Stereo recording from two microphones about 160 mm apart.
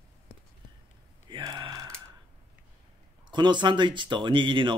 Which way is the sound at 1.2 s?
30° right (ahead or behind).